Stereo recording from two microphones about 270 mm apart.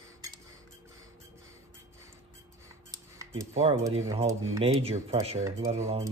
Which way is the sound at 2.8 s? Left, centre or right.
Centre.